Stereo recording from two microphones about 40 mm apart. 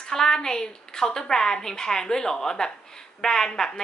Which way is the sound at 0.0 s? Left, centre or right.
Centre.